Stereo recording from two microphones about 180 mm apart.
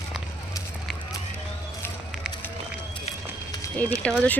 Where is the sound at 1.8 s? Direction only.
10° left (ahead or behind).